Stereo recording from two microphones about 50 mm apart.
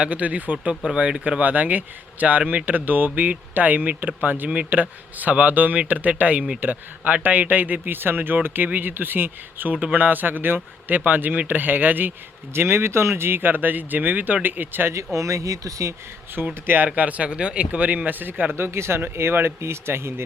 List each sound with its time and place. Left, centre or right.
0.0 s a man's voice: right
12.5 s speech: right
14.9 s speech: right
16.6 s speech: right
16.9 s a man's voice: right
18.5 s speech: right